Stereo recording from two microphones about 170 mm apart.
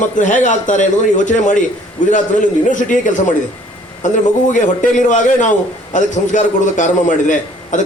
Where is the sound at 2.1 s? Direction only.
50° left (ahead or behind).